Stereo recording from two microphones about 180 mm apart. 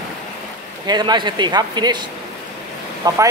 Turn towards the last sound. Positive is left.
turn(degrees=-20)  # may be behind; listen again after turning